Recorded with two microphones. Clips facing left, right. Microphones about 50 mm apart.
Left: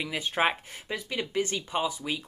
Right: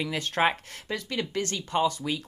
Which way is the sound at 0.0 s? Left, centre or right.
Centre.